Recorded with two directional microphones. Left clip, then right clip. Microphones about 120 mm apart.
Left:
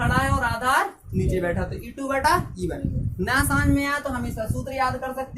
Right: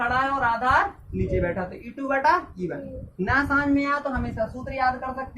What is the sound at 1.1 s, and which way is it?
Speech, 55° left (ahead or behind).